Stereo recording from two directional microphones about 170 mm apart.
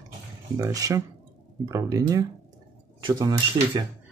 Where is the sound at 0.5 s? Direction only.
20° right (ahead or behind).